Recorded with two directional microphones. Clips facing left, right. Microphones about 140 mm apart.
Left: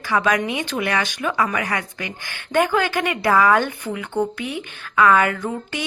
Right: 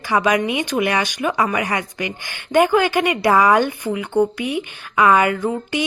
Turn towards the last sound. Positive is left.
turn(degrees=-15)  # may be behind; listen again after turning